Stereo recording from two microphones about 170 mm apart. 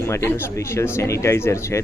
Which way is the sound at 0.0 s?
15° left (ahead or behind).